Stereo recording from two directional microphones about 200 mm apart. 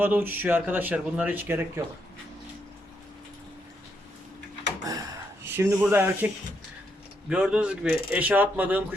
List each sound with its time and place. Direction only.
0.0 s speech: 10° right (ahead or behind)
4.8 s a sound: 15° right (ahead or behind)
5.5 s speech: 10° right (ahead or behind)